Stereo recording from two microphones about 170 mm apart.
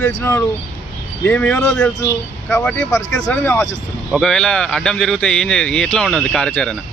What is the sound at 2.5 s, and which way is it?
Speech, 15° left (ahead or behind).